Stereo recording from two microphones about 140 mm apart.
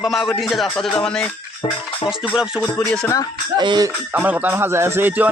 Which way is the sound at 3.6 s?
35° right (ahead or behind).